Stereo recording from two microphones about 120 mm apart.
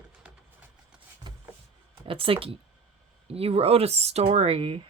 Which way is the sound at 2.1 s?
50° right (ahead or behind).